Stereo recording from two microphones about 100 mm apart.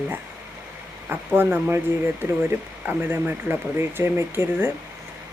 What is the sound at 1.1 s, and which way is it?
Speech, 20° right (ahead or behind).